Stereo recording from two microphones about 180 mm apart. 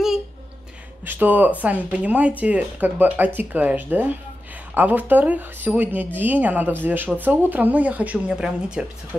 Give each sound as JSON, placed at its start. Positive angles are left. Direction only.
{"t": 1.0, "sound": "speech", "side_deg": -10}